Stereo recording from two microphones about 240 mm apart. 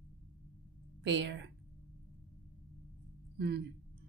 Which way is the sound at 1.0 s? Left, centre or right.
Right.